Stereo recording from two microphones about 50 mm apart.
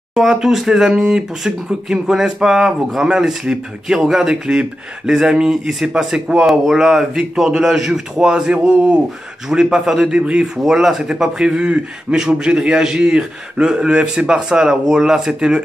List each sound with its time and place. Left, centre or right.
0.1 s speech: centre
10.6 s speech: centre